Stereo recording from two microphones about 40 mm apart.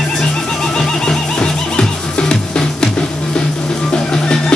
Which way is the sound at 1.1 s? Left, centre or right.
Centre.